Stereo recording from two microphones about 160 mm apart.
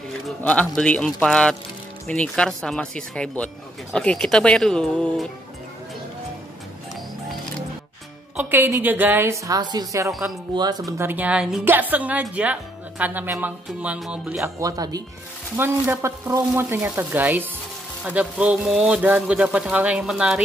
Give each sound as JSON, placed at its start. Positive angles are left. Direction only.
{"t": 0.4, "sound": "speech", "side_deg": 10}
{"t": 8.4, "sound": "a man's voice", "side_deg": -10}
{"t": 10.9, "sound": "a man's voice", "side_deg": -15}
{"t": 14.4, "sound": "a man's voice", "side_deg": -20}